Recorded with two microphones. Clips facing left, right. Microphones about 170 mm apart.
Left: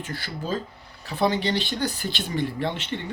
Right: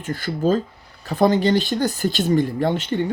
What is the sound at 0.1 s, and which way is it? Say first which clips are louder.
Speech: right 11 dB; 45° right (ahead or behind).